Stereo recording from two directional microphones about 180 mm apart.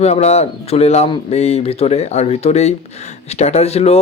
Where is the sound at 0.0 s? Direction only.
35° left (ahead or behind).